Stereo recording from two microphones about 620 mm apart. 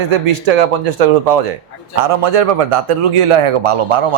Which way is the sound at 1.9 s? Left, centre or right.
Right.